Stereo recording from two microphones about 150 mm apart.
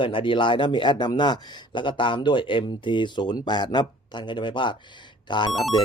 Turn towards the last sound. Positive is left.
turn(degrees=30)  # may be behind; listen again after turning